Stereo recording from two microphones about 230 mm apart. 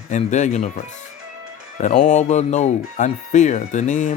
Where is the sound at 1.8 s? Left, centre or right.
Left.